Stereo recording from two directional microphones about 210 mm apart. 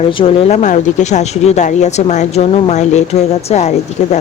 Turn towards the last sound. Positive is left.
turn(degrees=35)  # may be behind; listen again after turning